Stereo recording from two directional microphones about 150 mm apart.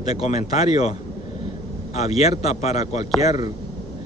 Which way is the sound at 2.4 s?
45° left (ahead or behind).